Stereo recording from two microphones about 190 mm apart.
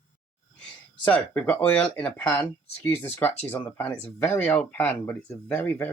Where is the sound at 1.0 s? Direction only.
10° left (ahead or behind).